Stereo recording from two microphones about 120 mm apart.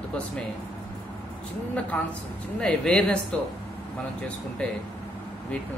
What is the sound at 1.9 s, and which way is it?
Speech, 10° left (ahead or behind).